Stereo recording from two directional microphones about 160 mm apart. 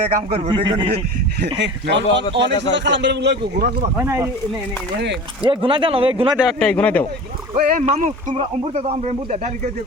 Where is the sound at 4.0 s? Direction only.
15° right (ahead or behind).